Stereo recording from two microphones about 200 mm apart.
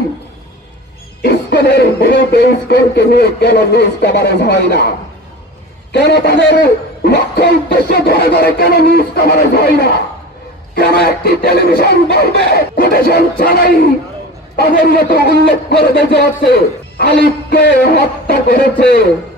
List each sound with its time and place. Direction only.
1.2 s a man's voice: 55° left (ahead or behind)
16.3 s a man's voice: 50° left (ahead or behind)